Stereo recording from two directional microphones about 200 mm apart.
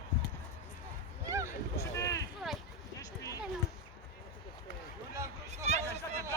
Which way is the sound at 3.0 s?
15° left (ahead or behind).